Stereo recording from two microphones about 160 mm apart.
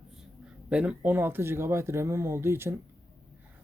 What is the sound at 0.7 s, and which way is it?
Speech, 5° right (ahead or behind).